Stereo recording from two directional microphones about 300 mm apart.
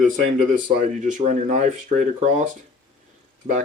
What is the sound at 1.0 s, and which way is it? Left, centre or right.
Speech, right.